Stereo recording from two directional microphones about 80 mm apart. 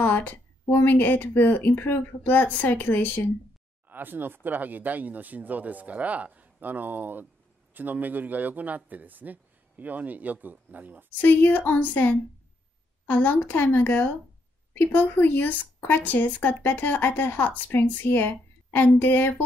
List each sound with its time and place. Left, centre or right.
0.0 s a sound: left
0.7 s a woman's voice: left
3.9 s speech: right
11.1 s a woman's voice: left